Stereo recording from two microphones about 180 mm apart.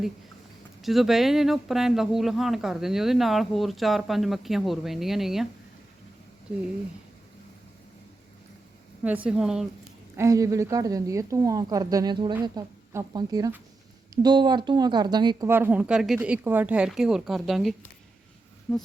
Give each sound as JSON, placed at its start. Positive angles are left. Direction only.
{"t": 0.8, "sound": "speech", "side_deg": 0}
{"t": 9.0, "sound": "speech", "side_deg": -5}
{"t": 10.2, "sound": "a woman's voice", "side_deg": -20}
{"t": 15.4, "sound": "speech", "side_deg": -10}